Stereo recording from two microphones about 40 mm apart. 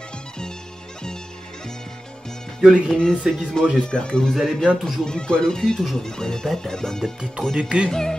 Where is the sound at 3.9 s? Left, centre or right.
Left.